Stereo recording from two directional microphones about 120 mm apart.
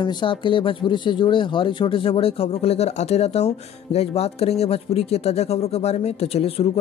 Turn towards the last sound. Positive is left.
turn(degrees=60)  # may be behind; listen again after turning